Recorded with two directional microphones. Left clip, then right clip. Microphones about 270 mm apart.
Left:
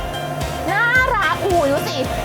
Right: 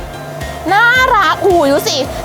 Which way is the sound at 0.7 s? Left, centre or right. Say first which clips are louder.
Right 7 dB; right.